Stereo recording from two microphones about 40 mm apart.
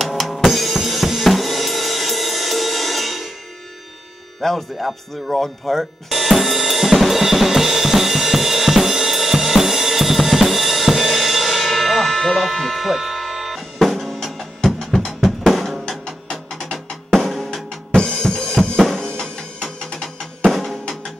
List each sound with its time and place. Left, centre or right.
0.0 s drum kit: centre
4.4 s music: centre
14.6 s music: centre
15.0 s music: centre
16.7 s drum: centre
17.9 s drum kit: left
18.8 s drum: centre
19.0 s music: centre
20.0 s drum: centre